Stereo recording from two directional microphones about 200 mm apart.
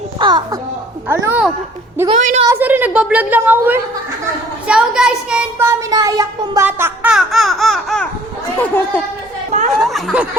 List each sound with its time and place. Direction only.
0.2 s a child's voice: 20° right (ahead or behind)
1.0 s a woman's voice: 10° right (ahead or behind)
2.0 s a woman's voice: 35° right (ahead or behind)
2.5 s a woman's voice: 10° right (ahead or behind)